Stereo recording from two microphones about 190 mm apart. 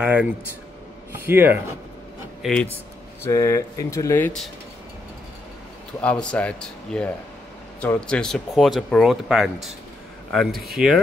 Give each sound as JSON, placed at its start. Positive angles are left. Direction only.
{"t": 0.0, "sound": "speech", "side_deg": -5}
{"t": 2.4, "sound": "speech", "side_deg": 5}
{"t": 3.3, "sound": "speech", "side_deg": 15}
{"t": 5.9, "sound": "speech", "side_deg": 5}